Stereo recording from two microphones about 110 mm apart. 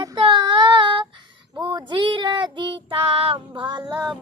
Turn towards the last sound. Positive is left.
turn(degrees=-40)  # may be behind; listen again after turning